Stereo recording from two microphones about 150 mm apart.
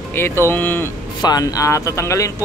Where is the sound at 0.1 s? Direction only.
15° left (ahead or behind).